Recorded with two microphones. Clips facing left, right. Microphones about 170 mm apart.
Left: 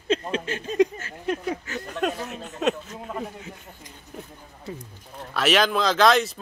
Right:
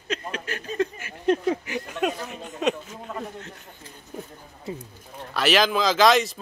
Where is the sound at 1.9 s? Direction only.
Centre (ahead or behind).